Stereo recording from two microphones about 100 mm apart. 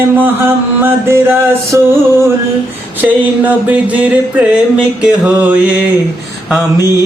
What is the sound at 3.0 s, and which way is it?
Mantra, 15° right (ahead or behind).